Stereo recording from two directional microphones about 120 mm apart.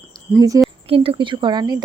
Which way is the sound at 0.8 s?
50° right (ahead or behind).